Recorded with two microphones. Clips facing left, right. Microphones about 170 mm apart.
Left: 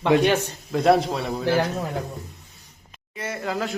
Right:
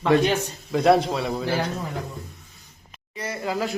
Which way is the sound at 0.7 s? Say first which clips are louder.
Even; centre (ahead or behind).